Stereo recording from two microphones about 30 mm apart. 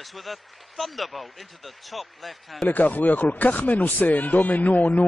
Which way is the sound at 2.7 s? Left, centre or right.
Left.